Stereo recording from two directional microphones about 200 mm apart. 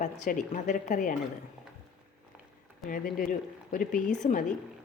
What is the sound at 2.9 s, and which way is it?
Speech, 45° left (ahead or behind).